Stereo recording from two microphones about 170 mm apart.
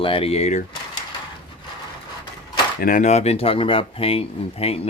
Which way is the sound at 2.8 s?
55° left (ahead or behind).